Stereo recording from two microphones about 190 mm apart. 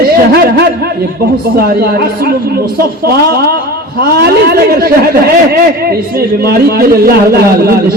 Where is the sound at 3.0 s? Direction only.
55° right (ahead or behind).